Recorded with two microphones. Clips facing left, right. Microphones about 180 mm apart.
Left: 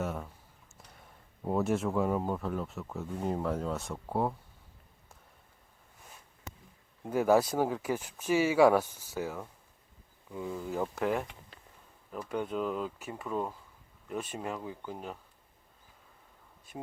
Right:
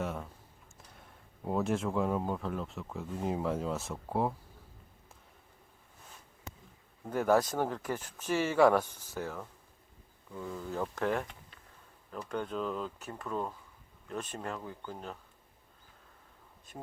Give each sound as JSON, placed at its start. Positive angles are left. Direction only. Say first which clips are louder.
{"t": 0.0, "sound": "a sound", "louder": "left 1 dB", "side_deg": 0}
{"t": 1.5, "sound": "speech", "louder": "left 2 dB", "side_deg": 0}
{"t": 7.0, "sound": "speech", "louder": "left 2 dB", "side_deg": 5}